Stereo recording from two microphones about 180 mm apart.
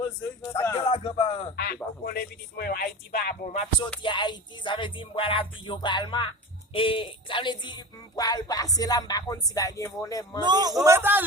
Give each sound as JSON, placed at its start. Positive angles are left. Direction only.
{"t": 0.0, "sound": "a sound", "side_deg": 15}
{"t": 0.6, "sound": "speech", "side_deg": 20}
{"t": 0.9, "sound": "speech", "side_deg": 35}
{"t": 1.5, "sound": "speech", "side_deg": 60}
{"t": 4.0, "sound": "speech", "side_deg": 25}
{"t": 10.4, "sound": "a man's voice", "side_deg": -20}